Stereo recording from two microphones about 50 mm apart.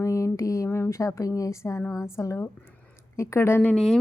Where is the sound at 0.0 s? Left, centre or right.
Left.